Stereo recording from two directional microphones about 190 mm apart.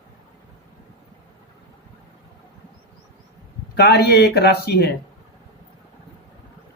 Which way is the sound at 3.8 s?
60° left (ahead or behind).